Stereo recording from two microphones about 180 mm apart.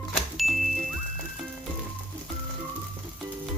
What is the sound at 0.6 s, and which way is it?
Music, 45° right (ahead or behind).